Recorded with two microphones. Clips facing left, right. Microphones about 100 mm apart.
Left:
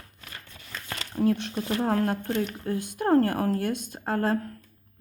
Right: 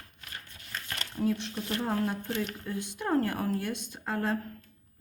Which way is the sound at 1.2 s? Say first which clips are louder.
Left 5 dB; 55° left (ahead or behind).